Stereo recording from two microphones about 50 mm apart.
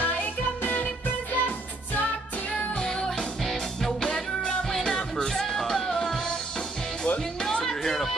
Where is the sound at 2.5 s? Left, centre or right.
Left.